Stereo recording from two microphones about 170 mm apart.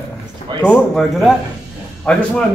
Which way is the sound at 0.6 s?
Centre (ahead or behind).